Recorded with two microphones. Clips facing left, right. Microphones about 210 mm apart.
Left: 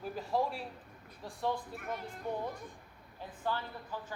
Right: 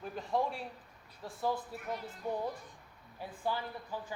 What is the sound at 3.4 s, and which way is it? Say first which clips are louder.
Speech: right 1 dB; 10° right (ahead or behind).